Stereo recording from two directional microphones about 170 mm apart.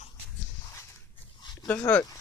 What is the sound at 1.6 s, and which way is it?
Speech, 10° left (ahead or behind).